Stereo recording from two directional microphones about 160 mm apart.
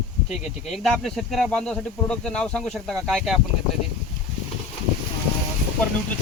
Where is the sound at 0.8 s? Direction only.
Centre (ahead or behind).